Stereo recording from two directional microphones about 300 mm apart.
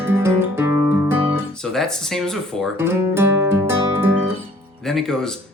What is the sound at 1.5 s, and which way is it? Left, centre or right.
Speech, centre.